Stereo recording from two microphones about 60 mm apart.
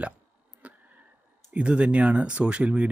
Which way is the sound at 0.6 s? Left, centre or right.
Right.